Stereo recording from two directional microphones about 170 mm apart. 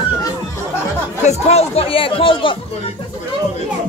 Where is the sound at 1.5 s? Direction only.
35° left (ahead or behind).